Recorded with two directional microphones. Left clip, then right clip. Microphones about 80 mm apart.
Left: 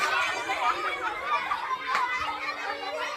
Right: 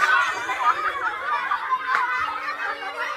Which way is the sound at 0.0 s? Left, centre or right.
Centre.